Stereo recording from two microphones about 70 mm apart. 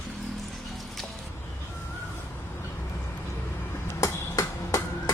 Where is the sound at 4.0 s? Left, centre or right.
Left.